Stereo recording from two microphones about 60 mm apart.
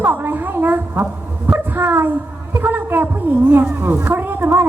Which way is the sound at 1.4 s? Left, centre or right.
Right.